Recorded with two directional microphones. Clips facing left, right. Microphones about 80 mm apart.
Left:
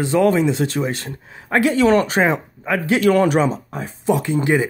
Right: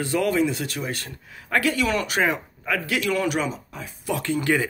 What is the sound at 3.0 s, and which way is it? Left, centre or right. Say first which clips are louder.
Speech: left 11 dB; left.